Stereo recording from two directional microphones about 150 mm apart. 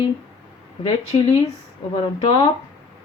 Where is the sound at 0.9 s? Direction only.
40° left (ahead or behind).